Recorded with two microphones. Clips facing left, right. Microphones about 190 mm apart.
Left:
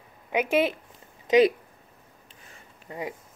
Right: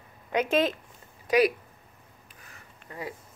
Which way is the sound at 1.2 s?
25° left (ahead or behind).